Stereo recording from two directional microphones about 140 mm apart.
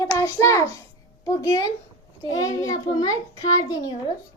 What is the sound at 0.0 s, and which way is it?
A child's voice, 20° left (ahead or behind).